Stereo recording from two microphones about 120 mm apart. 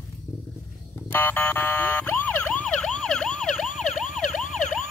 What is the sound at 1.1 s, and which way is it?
Emergency vehicle, 15° left (ahead or behind).